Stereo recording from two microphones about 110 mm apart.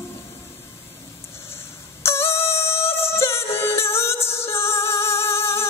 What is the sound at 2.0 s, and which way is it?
Music, 25° left (ahead or behind).